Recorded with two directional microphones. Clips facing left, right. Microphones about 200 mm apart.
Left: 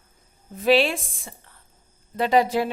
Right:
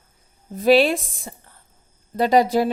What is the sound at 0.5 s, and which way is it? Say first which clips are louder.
A woman's voice: right 4 dB; 40° right (ahead or behind).